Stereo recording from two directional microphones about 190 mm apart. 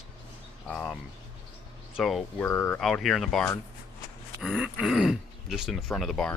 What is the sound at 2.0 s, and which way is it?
Speech, centre (ahead or behind).